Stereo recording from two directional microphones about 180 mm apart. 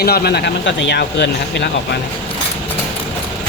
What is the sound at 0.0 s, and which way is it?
Speech, 60° left (ahead or behind).